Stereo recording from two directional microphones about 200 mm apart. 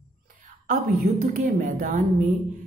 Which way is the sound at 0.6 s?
40° right (ahead or behind).